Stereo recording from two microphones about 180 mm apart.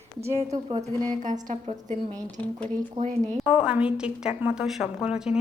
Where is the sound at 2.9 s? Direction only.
40° right (ahead or behind).